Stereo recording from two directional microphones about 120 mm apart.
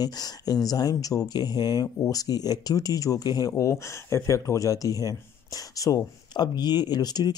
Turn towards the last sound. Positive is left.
turn(degrees=35)  # may be behind; listen again after turning